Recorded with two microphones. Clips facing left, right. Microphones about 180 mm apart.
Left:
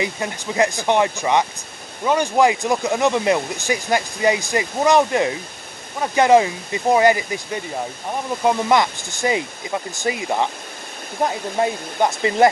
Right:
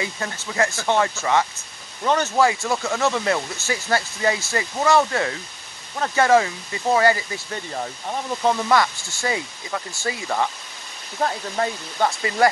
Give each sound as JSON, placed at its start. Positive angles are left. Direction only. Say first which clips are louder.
{"t": 0.0, "sound": "speech", "louder": "left 4 dB", "side_deg": 15}